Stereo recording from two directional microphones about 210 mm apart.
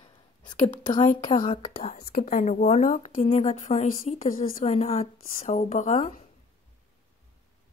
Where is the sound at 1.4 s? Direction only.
25° left (ahead or behind).